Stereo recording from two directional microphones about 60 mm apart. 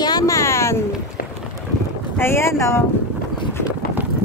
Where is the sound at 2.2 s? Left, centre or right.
Left.